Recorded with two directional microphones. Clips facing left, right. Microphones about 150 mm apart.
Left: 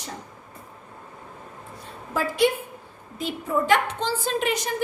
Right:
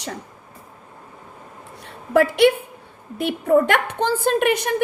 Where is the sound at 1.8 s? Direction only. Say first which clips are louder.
Right 10 dB; 70° right (ahead or behind).